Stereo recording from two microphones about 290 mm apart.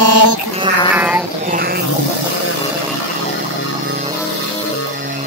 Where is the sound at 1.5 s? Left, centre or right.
Right.